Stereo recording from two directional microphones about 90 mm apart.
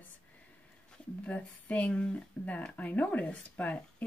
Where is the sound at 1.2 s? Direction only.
15° left (ahead or behind).